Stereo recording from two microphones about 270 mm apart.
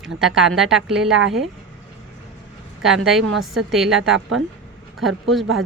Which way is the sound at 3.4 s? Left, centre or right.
Centre.